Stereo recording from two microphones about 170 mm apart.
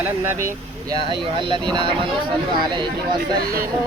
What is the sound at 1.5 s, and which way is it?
Speech, 30° right (ahead or behind).